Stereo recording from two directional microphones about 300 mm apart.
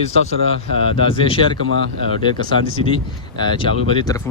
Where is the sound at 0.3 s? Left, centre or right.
Centre.